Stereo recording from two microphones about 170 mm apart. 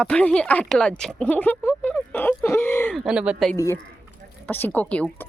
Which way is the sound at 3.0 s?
5° right (ahead or behind).